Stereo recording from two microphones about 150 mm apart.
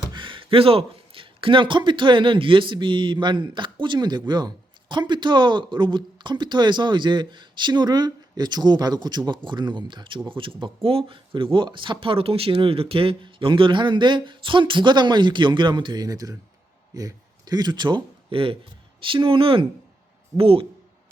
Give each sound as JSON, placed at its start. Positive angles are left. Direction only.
{"t": 0.1, "sound": "a man's voice", "side_deg": -35}